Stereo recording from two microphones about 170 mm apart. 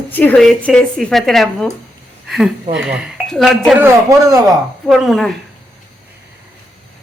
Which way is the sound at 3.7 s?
15° right (ahead or behind).